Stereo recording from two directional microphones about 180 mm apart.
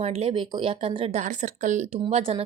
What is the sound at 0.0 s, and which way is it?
Speech, 35° right (ahead or behind).